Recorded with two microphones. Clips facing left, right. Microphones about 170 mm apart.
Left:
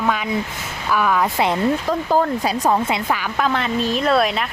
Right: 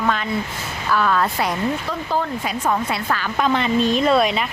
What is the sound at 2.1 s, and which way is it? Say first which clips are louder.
Speech: left 4 dB; 40° left (ahead or behind).